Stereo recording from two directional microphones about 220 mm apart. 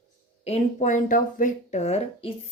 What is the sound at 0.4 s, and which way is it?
A woman's voice, 30° left (ahead or behind).